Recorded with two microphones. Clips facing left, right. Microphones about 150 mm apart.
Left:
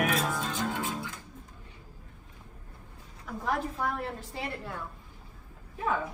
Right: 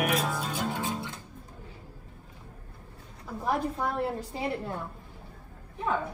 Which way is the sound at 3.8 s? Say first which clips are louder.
Right 3 dB; 10° right (ahead or behind).